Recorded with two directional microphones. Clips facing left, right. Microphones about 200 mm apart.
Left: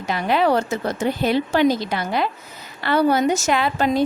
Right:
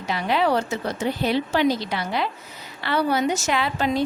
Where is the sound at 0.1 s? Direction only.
50° left (ahead or behind).